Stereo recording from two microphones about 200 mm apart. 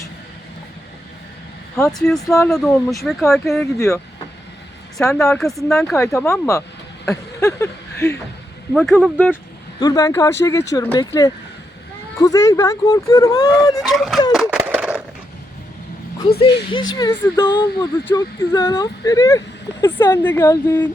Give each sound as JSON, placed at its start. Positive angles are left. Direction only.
{"t": 1.7, "sound": "speech", "side_deg": 0}
{"t": 3.8, "sound": "speech", "side_deg": 15}
{"t": 5.2, "sound": "speech", "side_deg": 5}
{"t": 6.0, "sound": "speech", "side_deg": 15}
{"t": 8.7, "sound": "speech", "side_deg": 0}
{"t": 9.8, "sound": "speech", "side_deg": 20}
{"t": 13.8, "sound": "speech", "side_deg": 0}
{"t": 14.3, "sound": "a sound", "side_deg": -5}
{"t": 16.2, "sound": "speech", "side_deg": 25}